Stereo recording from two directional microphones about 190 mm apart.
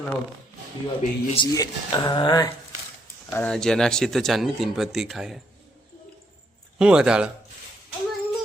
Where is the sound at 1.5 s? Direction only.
20° left (ahead or behind).